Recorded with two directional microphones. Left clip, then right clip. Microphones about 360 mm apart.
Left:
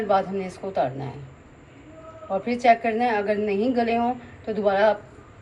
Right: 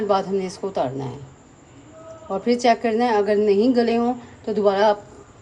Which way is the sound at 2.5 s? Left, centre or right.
Right.